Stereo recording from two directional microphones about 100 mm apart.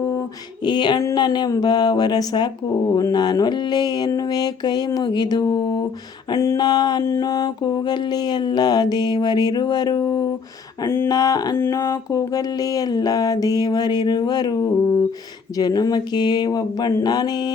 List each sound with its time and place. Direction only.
0.6 s speech: 50° left (ahead or behind)
6.3 s mantra: 30° left (ahead or behind)
6.6 s speech: 45° left (ahead or behind)
10.8 s a sound: 25° left (ahead or behind)
11.1 s mantra: 40° left (ahead or behind)
11.5 s mantra: 30° left (ahead or behind)
15.5 s speech: 40° left (ahead or behind)